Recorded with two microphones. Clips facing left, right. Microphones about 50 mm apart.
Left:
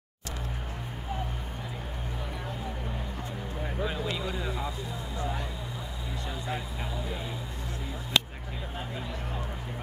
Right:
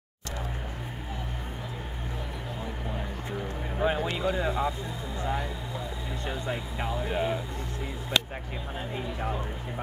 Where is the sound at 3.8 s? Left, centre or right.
Right.